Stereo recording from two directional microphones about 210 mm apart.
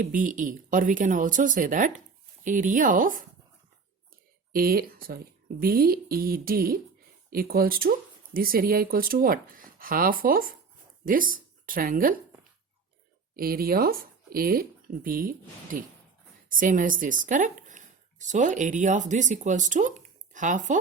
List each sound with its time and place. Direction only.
0.0 s speech: 40° right (ahead or behind)
4.5 s speech: 45° right (ahead or behind)
13.3 s speech: 45° right (ahead or behind)